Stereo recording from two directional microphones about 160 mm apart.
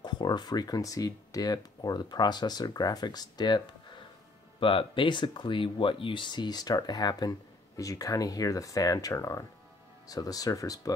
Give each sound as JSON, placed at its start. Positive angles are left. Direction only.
{"t": 0.0, "sound": "speech", "side_deg": 25}